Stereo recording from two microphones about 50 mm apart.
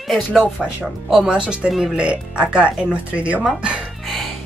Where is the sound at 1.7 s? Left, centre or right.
Centre.